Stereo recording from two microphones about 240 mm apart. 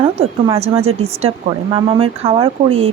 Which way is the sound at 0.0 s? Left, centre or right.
Right.